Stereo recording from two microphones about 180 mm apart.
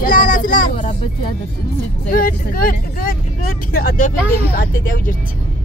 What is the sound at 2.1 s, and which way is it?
Speech, 50° left (ahead or behind).